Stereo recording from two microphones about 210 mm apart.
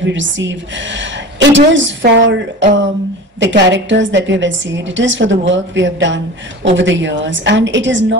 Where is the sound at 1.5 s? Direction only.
60° right (ahead or behind).